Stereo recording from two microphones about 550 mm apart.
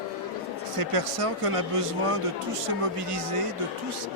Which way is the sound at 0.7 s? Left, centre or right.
Right.